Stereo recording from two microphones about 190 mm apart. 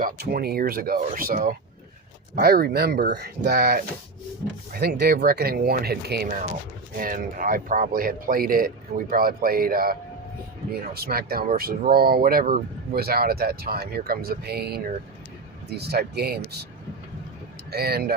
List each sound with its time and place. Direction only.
0.0 s speech: 50° right (ahead or behind)
6.2 s speech: 40° right (ahead or behind)
17.7 s speech: 55° right (ahead or behind)